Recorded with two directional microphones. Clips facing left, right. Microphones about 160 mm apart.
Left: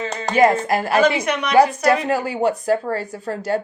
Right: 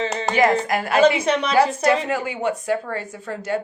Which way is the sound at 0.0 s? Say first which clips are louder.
Right 2 dB; 25° right (ahead or behind).